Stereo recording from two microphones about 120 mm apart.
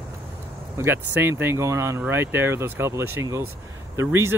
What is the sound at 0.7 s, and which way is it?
Speech, 20° right (ahead or behind).